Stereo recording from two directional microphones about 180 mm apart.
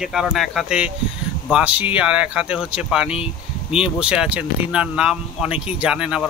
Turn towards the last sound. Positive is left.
turn(degrees=-5)  # may be behind; listen again after turning